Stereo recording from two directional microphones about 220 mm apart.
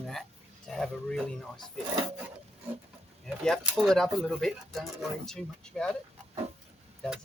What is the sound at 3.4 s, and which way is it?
Speech, centre (ahead or behind).